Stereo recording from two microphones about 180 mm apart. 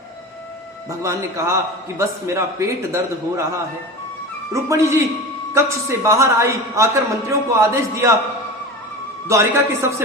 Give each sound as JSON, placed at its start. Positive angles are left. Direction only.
{"t": 0.9, "sound": "a man's voice", "side_deg": -15}
{"t": 4.5, "sound": "a man's voice", "side_deg": -15}
{"t": 9.2, "sound": "a man's voice", "side_deg": -15}